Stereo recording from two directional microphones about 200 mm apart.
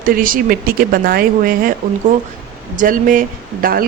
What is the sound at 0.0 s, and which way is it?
Speech, 45° right (ahead or behind).